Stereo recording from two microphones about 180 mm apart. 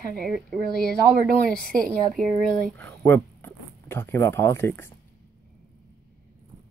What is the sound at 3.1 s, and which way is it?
Speech, 10° left (ahead or behind).